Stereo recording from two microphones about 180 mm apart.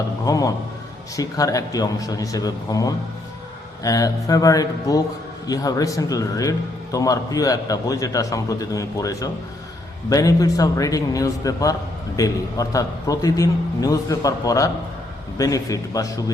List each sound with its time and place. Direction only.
0.3 s a man's voice: 20° left (ahead or behind)